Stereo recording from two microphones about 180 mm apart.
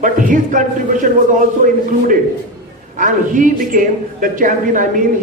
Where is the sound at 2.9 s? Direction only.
45° right (ahead or behind).